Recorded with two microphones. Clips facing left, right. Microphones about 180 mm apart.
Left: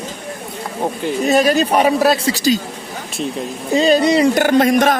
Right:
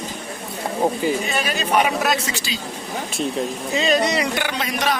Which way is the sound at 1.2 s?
40° left (ahead or behind).